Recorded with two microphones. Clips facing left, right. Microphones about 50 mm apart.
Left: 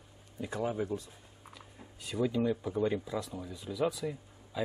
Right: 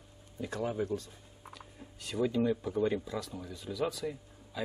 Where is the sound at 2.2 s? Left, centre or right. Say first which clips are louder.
Right 1 dB; centre.